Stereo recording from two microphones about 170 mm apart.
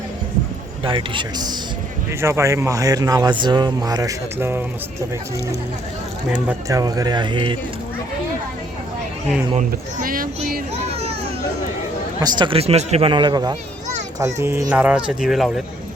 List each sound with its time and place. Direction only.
0.9 s speech: 30° right (ahead or behind); by 4.6 s 15° right (ahead or behind)
6.5 s speech: 20° right (ahead or behind)
9.6 s speech: 55° right (ahead or behind)
10.8 s children playing: 35° right (ahead or behind)
12.2 s speech: 30° right (ahead or behind); by 15.6 s centre (ahead or behind)